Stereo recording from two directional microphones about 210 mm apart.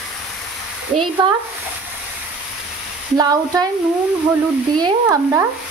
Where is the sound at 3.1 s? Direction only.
15° right (ahead or behind).